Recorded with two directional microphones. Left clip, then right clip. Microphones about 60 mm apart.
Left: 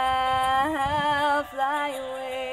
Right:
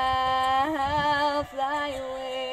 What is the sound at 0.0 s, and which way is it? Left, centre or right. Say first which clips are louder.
Music: left 1 dB; right.